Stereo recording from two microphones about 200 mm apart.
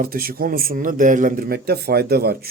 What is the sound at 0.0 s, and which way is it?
A man's voice, 45° right (ahead or behind).